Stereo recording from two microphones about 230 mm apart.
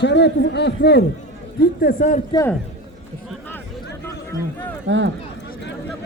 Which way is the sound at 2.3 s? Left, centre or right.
Centre.